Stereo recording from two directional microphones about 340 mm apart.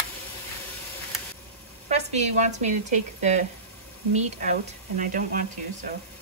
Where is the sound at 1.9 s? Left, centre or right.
Centre.